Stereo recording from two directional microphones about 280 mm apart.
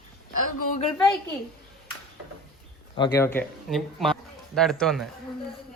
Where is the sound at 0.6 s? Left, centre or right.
Left.